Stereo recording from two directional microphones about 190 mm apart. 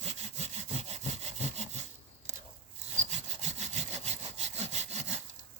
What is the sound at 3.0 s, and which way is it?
Sawing, 35° right (ahead or behind).